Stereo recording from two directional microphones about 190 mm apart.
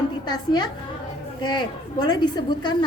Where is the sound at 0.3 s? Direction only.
20° left (ahead or behind).